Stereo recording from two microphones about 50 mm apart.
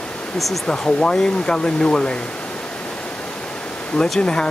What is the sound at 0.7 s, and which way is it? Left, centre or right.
Speech, centre.